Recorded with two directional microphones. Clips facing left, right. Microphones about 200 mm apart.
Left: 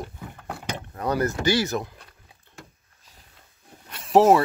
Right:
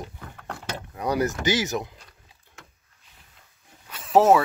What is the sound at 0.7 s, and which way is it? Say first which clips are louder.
Speech: right 1 dB; 10° right (ahead or behind).